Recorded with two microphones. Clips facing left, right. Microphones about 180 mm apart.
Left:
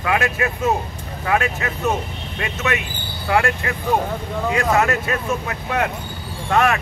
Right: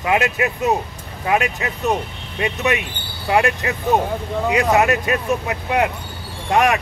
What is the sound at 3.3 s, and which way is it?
Speech, 20° right (ahead or behind).